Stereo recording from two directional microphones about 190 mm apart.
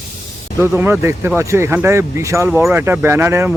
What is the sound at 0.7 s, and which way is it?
Speech, 10° right (ahead or behind).